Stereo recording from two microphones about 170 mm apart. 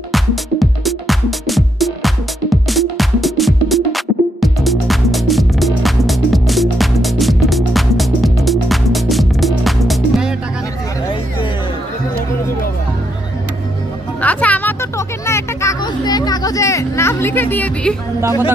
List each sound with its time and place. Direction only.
0.1 s music: centre (ahead or behind)
14.2 s music: 10° left (ahead or behind)